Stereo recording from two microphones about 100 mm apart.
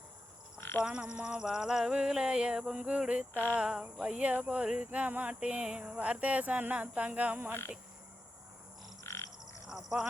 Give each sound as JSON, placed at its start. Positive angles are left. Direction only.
{"t": 0.6, "sound": "frog", "side_deg": 25}
{"t": 0.9, "sound": "speech", "side_deg": -10}
{"t": 9.0, "sound": "frog", "side_deg": 30}
{"t": 9.6, "sound": "a sound", "side_deg": -5}